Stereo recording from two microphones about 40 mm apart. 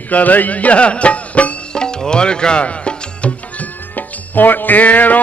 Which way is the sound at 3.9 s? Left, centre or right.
Left.